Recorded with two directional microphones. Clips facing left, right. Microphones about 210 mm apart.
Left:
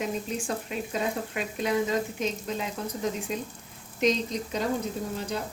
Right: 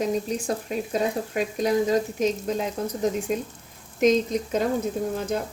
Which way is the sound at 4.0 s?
50° right (ahead or behind).